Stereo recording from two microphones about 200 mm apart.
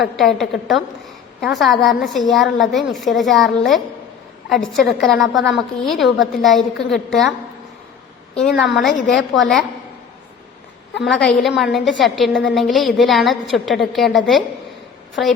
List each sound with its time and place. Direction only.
0.0 s a woman's voice: centre (ahead or behind)
8.4 s a woman's voice: centre (ahead or behind)
11.0 s a woman's voice: centre (ahead or behind)